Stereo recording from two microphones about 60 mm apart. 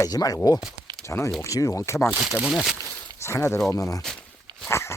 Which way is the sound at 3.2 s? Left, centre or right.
Left.